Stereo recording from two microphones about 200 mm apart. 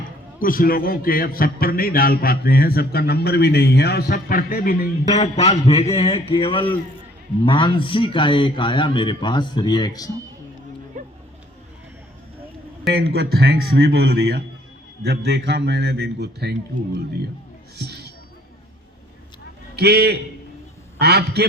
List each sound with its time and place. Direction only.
0.3 s a man's voice: 45° left (ahead or behind)
5.1 s a man's voice: 35° left (ahead or behind)
11.0 s vehicle: 40° right (ahead or behind)
12.9 s a man's voice: 50° right (ahead or behind)
17.7 s music: 55° right (ahead or behind)
19.7 s a man's voice: 55° right (ahead or behind)